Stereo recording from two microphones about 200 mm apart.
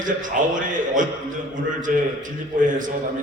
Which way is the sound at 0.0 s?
40° right (ahead or behind).